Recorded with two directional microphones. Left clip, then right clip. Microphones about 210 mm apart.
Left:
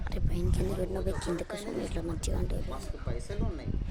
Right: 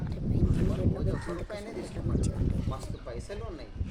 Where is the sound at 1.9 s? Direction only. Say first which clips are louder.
Right 1 dB; 40° left (ahead or behind).